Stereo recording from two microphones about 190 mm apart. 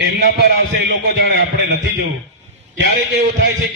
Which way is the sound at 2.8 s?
55° right (ahead or behind).